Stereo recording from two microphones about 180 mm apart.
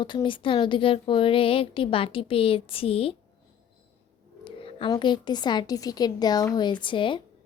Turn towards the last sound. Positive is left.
turn(degrees=25)  # may be behind; listen again after turning